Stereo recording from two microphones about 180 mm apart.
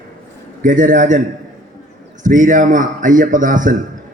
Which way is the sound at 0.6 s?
45° right (ahead or behind).